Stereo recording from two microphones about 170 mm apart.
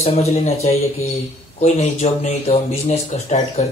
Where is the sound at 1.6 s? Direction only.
40° left (ahead or behind).